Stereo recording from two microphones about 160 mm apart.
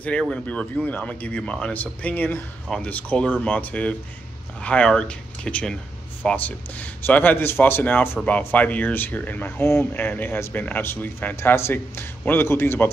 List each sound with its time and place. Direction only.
0.0 s speech: 5° left (ahead or behind)